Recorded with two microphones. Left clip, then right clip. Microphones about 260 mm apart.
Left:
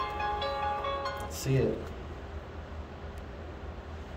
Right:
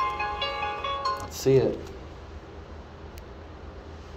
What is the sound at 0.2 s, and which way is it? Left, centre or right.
Music, right.